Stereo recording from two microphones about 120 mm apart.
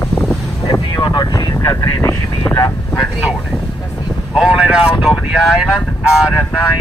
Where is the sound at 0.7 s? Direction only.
40° left (ahead or behind); by 2.6 s 20° left (ahead or behind).